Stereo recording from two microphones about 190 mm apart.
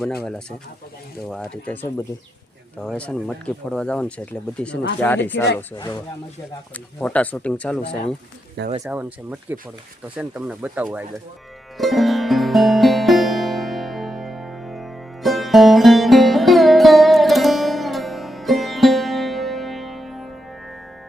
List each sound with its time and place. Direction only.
0.0 s speech: 5° left (ahead or behind)
5.7 s speech: 25° left (ahead or behind)
6.7 s speech: 5° left (ahead or behind)
8.8 s speech: 5° right (ahead or behind)
11.8 s music: centre (ahead or behind)